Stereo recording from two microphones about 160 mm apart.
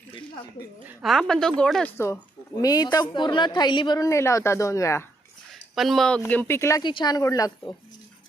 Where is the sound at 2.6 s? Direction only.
25° left (ahead or behind).